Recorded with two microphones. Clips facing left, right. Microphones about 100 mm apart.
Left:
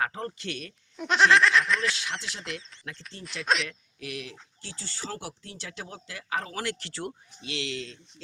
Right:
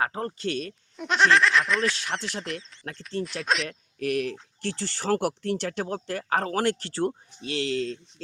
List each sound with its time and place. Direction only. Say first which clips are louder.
0.0 s speech: right 3 dB; 35° right (ahead or behind)
0.9 s speech: even; centre (ahead or behind)
3.7 s speech: right 11 dB; 50° right (ahead or behind)